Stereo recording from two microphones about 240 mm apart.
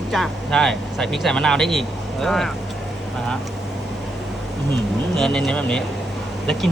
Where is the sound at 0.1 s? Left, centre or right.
Centre.